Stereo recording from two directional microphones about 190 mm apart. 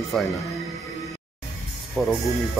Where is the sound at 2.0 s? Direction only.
10° left (ahead or behind).